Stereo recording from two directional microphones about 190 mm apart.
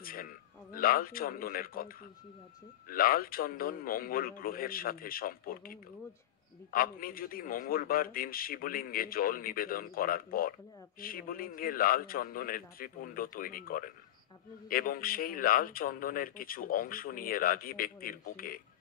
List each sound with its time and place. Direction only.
0.0 s a man's voice: 50° left (ahead or behind)
2.9 s speech: 50° left (ahead or behind)